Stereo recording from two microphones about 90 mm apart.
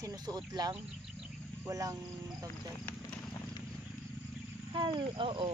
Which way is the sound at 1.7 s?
40° right (ahead or behind).